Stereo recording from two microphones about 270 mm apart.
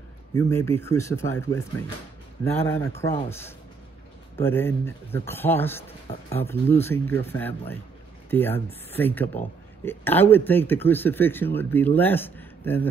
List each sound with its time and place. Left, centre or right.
0.5 s speech: centre